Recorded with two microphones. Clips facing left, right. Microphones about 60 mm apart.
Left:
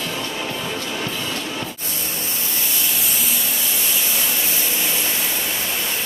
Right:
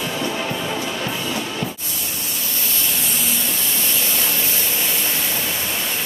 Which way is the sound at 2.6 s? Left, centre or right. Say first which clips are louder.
Right 1 dB; centre.